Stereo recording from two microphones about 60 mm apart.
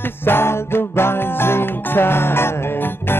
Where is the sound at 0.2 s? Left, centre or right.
Left.